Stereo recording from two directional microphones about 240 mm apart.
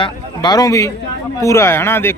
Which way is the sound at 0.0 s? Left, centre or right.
Centre.